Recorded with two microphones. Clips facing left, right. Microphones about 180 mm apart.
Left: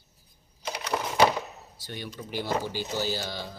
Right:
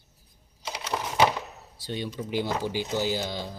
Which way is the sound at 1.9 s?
25° right (ahead or behind).